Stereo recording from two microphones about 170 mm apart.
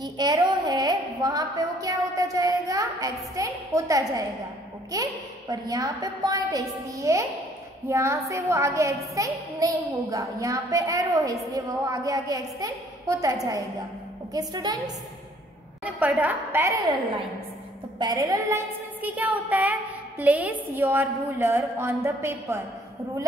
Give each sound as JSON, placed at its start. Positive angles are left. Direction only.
{"t": 0.0, "sound": "a woman's voice", "side_deg": -25}
{"t": 15.8, "sound": "a woman's voice", "side_deg": -10}
{"t": 17.9, "sound": "a woman's voice", "side_deg": -25}